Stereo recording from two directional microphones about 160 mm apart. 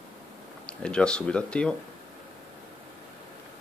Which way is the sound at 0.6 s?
5° left (ahead or behind).